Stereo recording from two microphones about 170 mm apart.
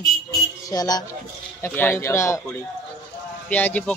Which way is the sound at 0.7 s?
20° left (ahead or behind).